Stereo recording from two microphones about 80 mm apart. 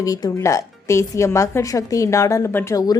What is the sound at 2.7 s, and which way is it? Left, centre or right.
Speech, left.